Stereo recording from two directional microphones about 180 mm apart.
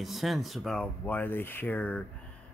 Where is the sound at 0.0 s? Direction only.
Centre (ahead or behind).